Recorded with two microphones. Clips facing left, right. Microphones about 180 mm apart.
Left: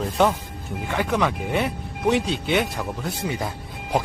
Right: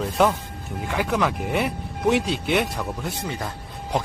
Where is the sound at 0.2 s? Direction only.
5° right (ahead or behind).